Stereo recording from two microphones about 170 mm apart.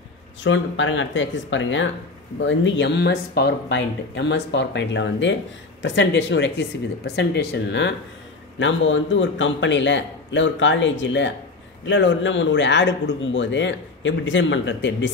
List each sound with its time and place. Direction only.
0.4 s speech: 90° left